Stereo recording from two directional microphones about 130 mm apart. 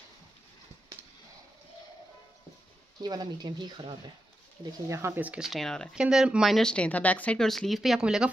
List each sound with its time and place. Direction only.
3.0 s speech: 35° right (ahead or behind)
4.8 s speech: 20° right (ahead or behind); by 8.3 s 5° right (ahead or behind)